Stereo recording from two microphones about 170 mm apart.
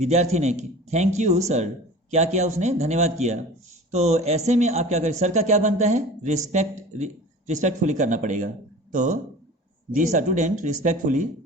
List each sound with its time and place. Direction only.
0.0 s a man's voice: 40° right (ahead or behind)